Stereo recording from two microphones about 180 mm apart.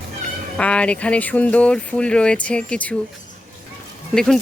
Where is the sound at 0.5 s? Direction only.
5° left (ahead or behind).